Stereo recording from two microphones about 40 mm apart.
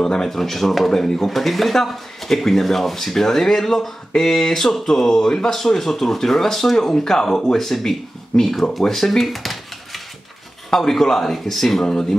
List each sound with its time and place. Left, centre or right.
0.0 s speech: centre
0.3 s speech: centre